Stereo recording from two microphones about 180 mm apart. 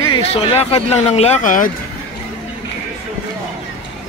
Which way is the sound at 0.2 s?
35° left (ahead or behind).